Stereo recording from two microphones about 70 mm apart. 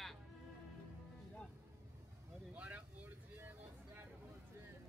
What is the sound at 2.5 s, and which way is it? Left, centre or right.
Vehicle, right.